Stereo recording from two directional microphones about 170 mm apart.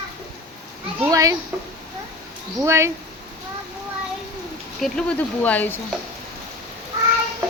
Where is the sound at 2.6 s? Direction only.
15° right (ahead or behind).